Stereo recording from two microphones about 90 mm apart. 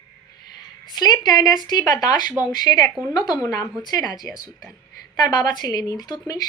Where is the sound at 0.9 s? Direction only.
50° left (ahead or behind).